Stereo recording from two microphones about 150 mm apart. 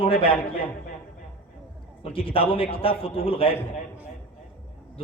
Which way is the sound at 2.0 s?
35° left (ahead or behind).